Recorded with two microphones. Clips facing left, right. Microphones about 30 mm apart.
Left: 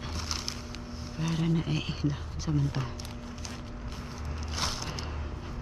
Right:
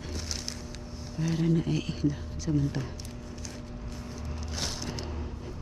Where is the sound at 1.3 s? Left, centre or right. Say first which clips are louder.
Right 3 dB; centre.